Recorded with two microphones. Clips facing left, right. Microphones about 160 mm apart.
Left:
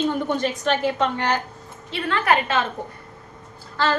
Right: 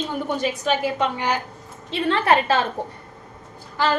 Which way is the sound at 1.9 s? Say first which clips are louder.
Right 2 dB; 25° right (ahead or behind).